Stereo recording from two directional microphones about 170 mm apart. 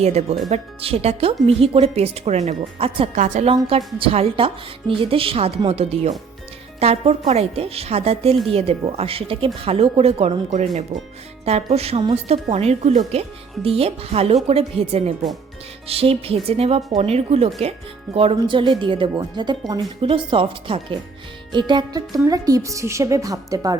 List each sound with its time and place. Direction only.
0.0 s speech: 40° right (ahead or behind); by 23.7 s 20° right (ahead or behind)